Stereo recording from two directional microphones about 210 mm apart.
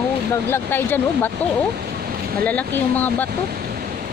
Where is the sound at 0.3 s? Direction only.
10° left (ahead or behind).